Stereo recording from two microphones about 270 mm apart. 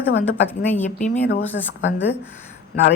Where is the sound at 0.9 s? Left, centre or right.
Left.